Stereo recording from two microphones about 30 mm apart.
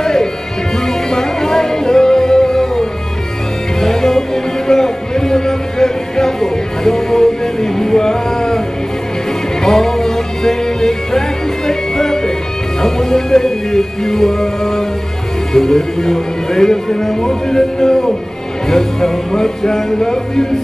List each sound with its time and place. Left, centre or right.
0.0 s music: centre
15.5 s speech: centre
18.7 s music: centre